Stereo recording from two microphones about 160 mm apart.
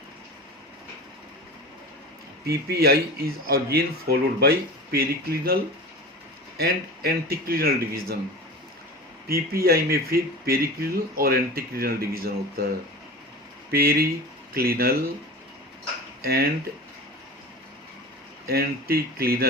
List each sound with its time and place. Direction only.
2.5 s speech: 80° right
6.6 s speech: 75° right (ahead or behind)
9.3 s speech: 70° right (ahead or behind)
13.7 s speech: 75° right (ahead or behind)
16.2 s speech: 75° right (ahead or behind)
18.4 s speech: 75° right (ahead or behind)